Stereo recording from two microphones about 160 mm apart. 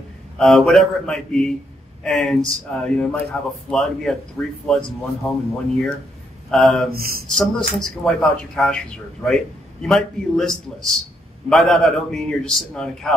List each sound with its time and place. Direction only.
0.4 s a man's voice: centre (ahead or behind)
6.5 s a man's voice: centre (ahead or behind)
6.9 s speech: 70° right (ahead or behind)
7.2 s a man's voice: 5° left (ahead or behind)